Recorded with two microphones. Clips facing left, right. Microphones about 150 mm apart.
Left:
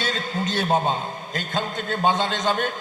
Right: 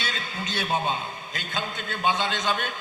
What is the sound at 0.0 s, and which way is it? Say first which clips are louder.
A man's voice: left 7 dB; 45° left (ahead or behind).